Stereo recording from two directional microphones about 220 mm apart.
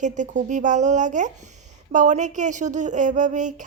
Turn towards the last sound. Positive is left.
turn(degrees=-35)  # may be behind; listen again after turning